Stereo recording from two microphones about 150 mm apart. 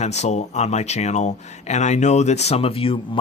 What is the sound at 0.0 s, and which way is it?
Speech, 50° left (ahead or behind).